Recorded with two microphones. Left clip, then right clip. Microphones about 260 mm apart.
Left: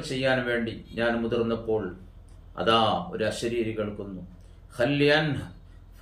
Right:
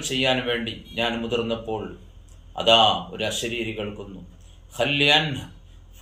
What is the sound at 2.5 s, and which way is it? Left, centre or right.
Speech, left.